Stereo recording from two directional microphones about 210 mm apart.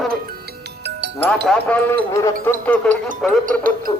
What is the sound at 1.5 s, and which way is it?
A man's voice, 10° left (ahead or behind).